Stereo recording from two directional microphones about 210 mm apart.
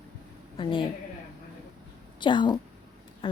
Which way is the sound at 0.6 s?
25° left (ahead or behind).